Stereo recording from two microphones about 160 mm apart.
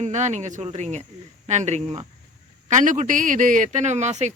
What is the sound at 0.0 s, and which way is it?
Speech, 50° right (ahead or behind).